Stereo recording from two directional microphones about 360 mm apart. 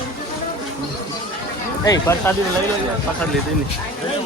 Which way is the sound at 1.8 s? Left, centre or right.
Centre.